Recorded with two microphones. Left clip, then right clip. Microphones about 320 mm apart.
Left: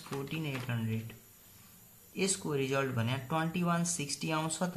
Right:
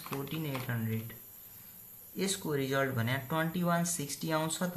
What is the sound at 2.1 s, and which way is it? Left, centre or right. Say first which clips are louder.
Speech: left 1 dB; centre.